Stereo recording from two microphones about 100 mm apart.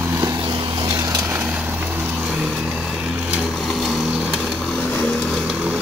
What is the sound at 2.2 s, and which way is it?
Vehicle, 5° right (ahead or behind).